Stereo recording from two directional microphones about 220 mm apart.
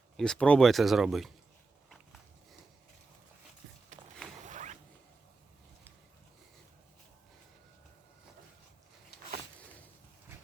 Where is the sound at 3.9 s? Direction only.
30° right (ahead or behind).